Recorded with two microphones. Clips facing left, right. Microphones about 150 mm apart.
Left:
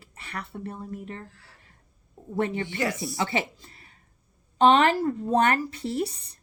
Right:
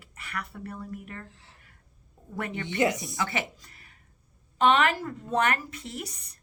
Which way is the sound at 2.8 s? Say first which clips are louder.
Right 5 dB; 20° right (ahead or behind).